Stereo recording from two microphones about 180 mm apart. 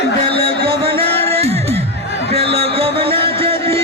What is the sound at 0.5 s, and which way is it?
Music, 60° right (ahead or behind).